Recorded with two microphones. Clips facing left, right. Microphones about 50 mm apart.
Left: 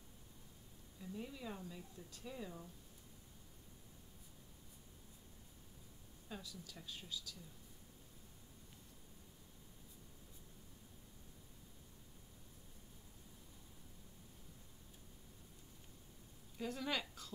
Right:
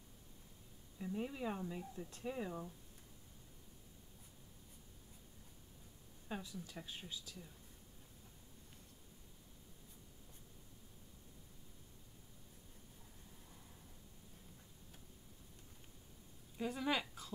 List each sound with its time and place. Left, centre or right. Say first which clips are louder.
0.9 s speech: right 6 dB; right
6.2 s speech: right 5 dB; right
16.5 s a sound: right 3 dB; centre